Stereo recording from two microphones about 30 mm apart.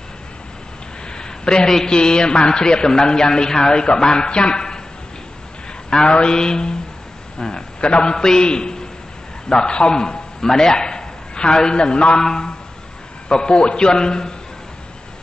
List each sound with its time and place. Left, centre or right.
1.0 s a sound: left
1.9 s a man's voice: left
6.0 s mantra: left
6.3 s a man's voice: left